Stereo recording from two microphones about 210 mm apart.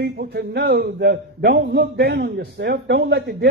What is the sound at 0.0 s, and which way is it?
A man's voice, 50° right (ahead or behind).